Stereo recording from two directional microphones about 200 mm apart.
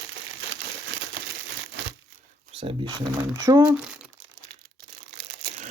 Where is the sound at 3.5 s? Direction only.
15° right (ahead or behind).